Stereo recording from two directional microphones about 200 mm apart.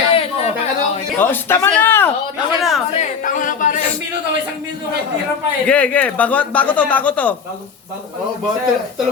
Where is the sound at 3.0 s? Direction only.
40° left (ahead or behind).